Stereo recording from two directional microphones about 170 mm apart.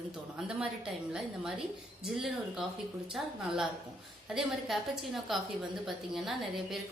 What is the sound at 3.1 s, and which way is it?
A woman's voice, centre (ahead or behind).